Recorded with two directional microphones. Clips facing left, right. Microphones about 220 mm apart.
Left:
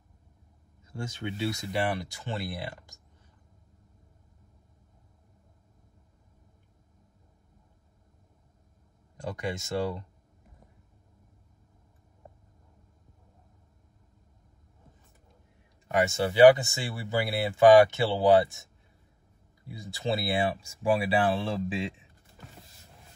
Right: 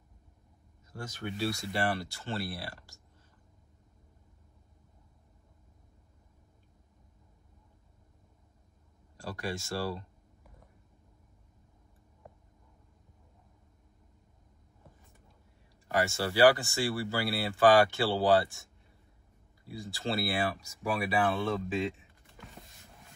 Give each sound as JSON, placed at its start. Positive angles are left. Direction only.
{"t": 1.0, "sound": "speech", "side_deg": 25}
{"t": 9.1, "sound": "speech", "side_deg": 20}
{"t": 16.1, "sound": "speech", "side_deg": 20}
{"t": 19.9, "sound": "speech", "side_deg": 20}